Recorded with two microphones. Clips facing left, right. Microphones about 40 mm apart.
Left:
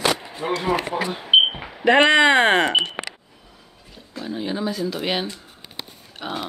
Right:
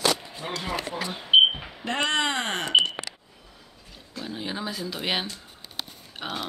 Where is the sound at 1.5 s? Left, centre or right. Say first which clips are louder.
Left 13 dB; left.